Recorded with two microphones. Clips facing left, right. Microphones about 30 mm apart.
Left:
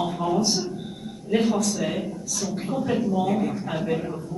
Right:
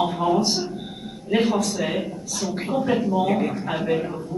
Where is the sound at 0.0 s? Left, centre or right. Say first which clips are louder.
Right 3 dB; right.